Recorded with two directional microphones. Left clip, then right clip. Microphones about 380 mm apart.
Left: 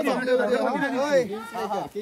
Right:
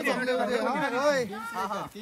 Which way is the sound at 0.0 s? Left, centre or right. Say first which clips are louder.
Left 4 dB; centre.